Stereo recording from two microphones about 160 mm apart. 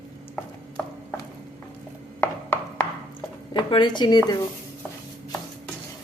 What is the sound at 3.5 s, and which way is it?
Speech, 30° left (ahead or behind).